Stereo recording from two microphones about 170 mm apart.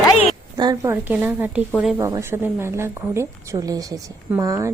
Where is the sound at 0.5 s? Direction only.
20° right (ahead or behind).